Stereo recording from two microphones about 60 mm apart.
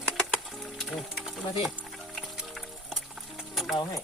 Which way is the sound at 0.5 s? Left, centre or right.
Centre.